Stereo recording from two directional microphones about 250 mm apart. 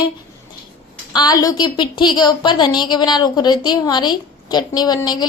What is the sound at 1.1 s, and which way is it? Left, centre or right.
A woman's voice, centre.